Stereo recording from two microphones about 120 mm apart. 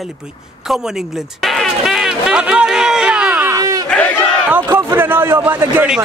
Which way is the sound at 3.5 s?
30° right (ahead or behind).